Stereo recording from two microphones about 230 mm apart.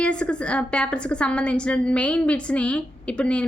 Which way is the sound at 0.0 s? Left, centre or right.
Centre.